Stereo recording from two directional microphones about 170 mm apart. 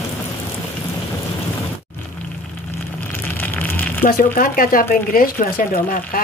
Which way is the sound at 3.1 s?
10° left (ahead or behind).